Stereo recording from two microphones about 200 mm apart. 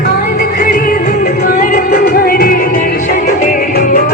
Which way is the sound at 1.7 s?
50° left (ahead or behind).